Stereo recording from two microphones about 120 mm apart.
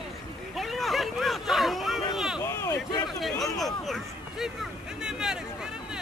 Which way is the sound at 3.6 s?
Centre (ahead or behind).